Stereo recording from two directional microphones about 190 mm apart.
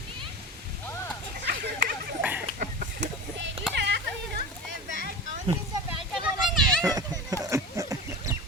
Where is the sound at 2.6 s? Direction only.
45° right (ahead or behind).